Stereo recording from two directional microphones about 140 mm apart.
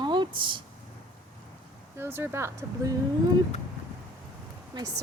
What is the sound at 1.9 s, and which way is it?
Speech, 15° right (ahead or behind).